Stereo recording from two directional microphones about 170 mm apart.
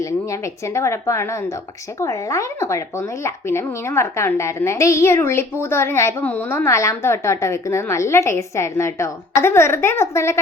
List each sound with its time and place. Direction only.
0.7 s a woman's voice: 15° left (ahead or behind)